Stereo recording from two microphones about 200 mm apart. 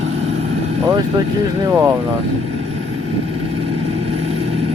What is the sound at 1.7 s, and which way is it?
Speech, 15° right (ahead or behind).